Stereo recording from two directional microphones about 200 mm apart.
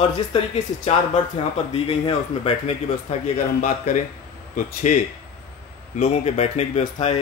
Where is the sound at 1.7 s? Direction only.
30° left (ahead or behind).